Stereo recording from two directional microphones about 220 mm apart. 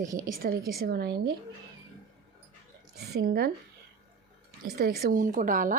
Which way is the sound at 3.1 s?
45° right (ahead or behind).